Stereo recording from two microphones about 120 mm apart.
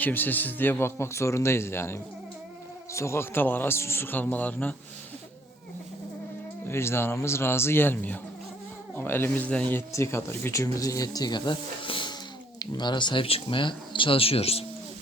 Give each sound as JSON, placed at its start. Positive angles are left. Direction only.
{"t": 0.0, "sound": "a man's voice", "side_deg": 15}
{"t": 6.7, "sound": "speech", "side_deg": 20}